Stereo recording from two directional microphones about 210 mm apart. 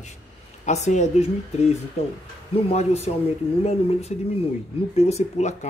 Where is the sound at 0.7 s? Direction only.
35° left (ahead or behind).